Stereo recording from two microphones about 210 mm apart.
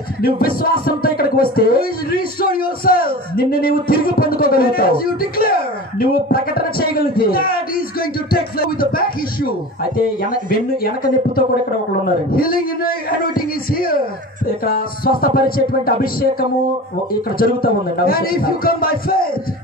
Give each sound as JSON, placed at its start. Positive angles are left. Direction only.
{"t": 0.2, "sound": "speech", "side_deg": 45}
{"t": 12.3, "sound": "speech", "side_deg": 45}